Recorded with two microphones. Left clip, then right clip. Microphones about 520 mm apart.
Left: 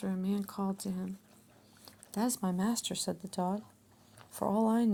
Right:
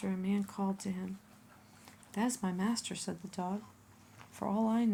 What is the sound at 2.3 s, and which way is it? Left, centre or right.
Speech, left.